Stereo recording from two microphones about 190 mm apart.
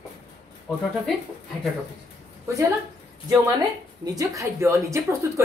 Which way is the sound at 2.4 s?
15° right (ahead or behind).